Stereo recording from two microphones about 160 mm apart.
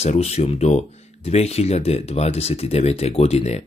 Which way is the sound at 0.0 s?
40° left (ahead or behind).